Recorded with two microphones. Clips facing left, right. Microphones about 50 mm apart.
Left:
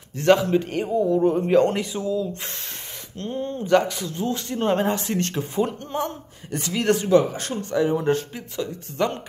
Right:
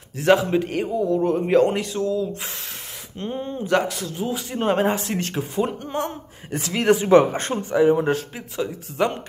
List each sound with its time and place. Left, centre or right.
0.2 s a man's voice: centre
3.2 s a man's voice: centre
7.1 s speech: right
7.7 s a man's voice: centre